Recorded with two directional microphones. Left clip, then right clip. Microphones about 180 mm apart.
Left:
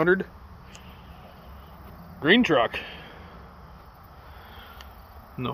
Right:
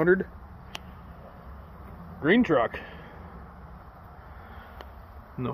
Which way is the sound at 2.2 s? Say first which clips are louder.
Left 3 dB; 30° left (ahead or behind).